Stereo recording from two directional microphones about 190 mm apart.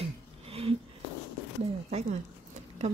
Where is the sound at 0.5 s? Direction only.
30° right (ahead or behind).